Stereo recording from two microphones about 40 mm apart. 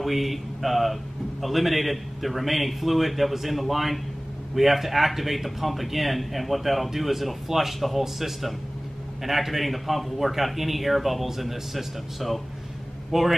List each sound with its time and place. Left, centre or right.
0.0 s a man's voice: centre